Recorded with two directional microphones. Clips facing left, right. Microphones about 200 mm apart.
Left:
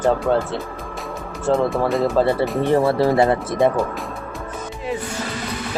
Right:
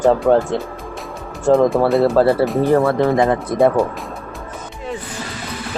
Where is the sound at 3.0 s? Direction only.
35° left (ahead or behind).